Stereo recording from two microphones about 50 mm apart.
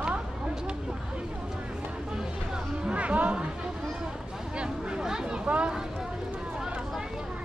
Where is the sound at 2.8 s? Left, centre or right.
Right.